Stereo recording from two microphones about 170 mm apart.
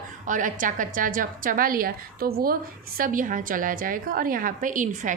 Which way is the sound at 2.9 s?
55° right (ahead or behind).